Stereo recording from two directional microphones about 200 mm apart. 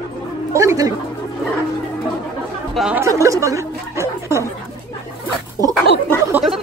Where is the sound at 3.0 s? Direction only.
15° right (ahead or behind).